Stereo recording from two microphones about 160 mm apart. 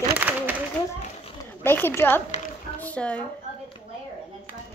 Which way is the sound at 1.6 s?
15° left (ahead or behind).